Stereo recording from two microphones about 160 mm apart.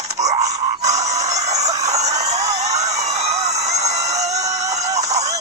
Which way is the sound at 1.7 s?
20° right (ahead or behind).